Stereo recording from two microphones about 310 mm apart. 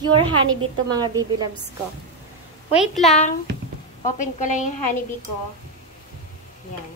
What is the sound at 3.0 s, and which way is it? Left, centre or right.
A woman's voice, left.